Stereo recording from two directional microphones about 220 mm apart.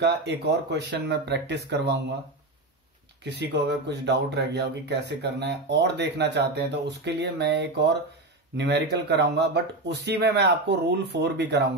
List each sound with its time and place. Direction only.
0.0 s speech: 50° right (ahead or behind)
3.3 s speech: 50° right (ahead or behind)